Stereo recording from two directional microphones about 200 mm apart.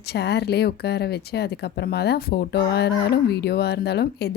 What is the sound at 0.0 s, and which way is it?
Speech, 55° left (ahead or behind).